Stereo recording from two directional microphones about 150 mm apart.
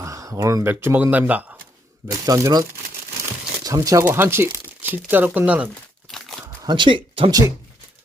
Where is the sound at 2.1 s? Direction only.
20° right (ahead or behind).